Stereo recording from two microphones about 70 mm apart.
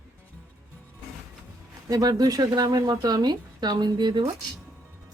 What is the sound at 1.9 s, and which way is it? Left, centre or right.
Speech, right.